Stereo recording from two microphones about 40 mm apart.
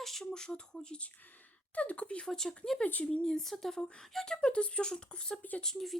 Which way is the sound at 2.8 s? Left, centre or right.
Left.